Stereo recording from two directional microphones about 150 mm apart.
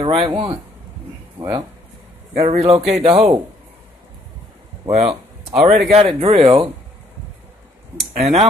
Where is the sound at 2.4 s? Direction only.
45° right (ahead or behind).